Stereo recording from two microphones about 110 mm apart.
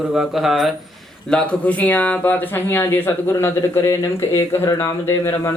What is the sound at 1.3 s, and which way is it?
Speech, 10° left (ahead or behind).